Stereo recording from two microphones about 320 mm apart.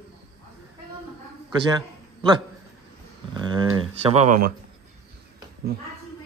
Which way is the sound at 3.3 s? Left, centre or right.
Centre.